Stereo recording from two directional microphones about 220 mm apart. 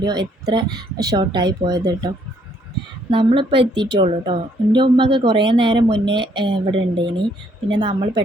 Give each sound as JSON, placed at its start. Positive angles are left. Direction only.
{"t": 0.0, "sound": "speech", "side_deg": -20}
{"t": 3.1, "sound": "speech", "side_deg": -20}